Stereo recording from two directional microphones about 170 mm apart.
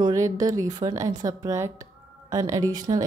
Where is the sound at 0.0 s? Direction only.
20° right (ahead or behind).